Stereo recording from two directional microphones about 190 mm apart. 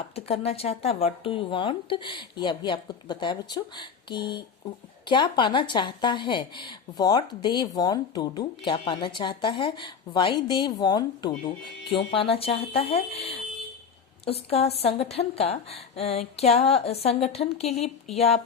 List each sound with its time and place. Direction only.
0.3 s a woman's voice: 30° left (ahead or behind)